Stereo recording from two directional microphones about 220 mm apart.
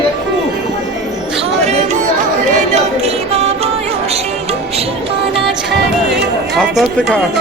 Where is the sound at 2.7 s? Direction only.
30° right (ahead or behind).